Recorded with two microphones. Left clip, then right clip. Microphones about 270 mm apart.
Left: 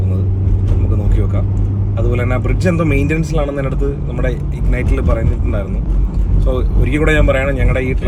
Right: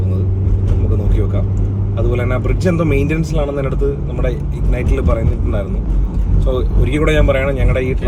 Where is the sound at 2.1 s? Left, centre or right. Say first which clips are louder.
Even; centre.